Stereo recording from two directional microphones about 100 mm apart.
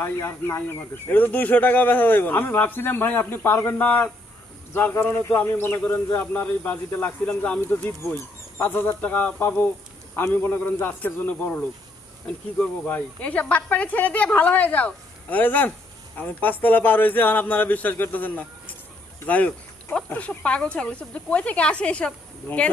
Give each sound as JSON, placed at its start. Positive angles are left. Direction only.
{"t": 0.0, "sound": "speech", "side_deg": 25}
{"t": 19.2, "sound": "a sound", "side_deg": 15}
{"t": 20.1, "sound": "speech", "side_deg": 15}